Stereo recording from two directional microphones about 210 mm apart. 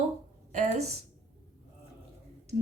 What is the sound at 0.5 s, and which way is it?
Speech, 35° right (ahead or behind).